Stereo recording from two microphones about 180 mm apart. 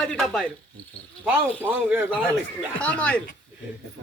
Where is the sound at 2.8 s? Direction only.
5° left (ahead or behind).